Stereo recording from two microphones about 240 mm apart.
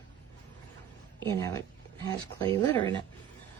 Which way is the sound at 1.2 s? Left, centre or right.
Centre.